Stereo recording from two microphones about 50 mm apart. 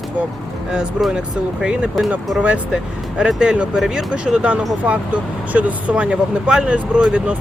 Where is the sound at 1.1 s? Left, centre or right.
Centre.